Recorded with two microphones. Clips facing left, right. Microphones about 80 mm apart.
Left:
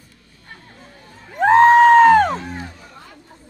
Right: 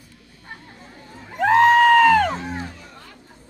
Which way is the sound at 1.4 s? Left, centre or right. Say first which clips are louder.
Left 4 dB; left.